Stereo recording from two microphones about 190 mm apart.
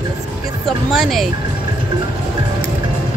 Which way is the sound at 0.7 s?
Centre (ahead or behind).